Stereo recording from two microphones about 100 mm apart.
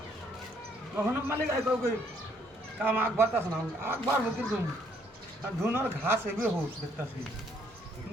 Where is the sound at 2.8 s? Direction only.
20° right (ahead or behind).